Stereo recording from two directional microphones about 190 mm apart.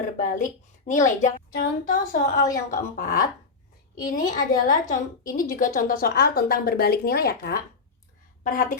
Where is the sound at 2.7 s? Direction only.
50° left (ahead or behind).